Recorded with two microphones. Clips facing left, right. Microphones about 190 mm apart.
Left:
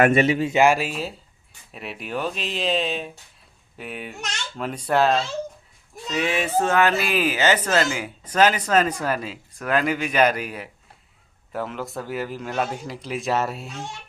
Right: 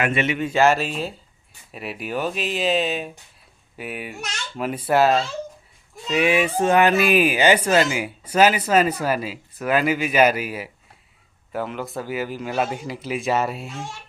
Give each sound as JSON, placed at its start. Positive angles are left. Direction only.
{"t": 0.0, "sound": "speech", "side_deg": 40}
{"t": 0.5, "sound": "speech", "side_deg": 10}